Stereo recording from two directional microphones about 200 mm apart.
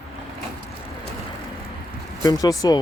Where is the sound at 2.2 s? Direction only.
20° left (ahead or behind).